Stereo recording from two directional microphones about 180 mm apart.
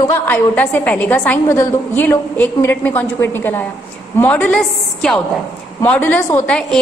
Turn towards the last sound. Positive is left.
turn(degrees=5)  # may be behind; listen again after turning